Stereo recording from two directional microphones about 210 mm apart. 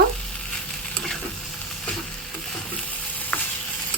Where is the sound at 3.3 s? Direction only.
5° left (ahead or behind).